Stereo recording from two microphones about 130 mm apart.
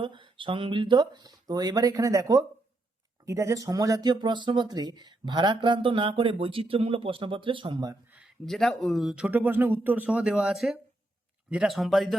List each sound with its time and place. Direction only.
0.0 s speech: 40° right (ahead or behind)
8.4 s speech: centre (ahead or behind)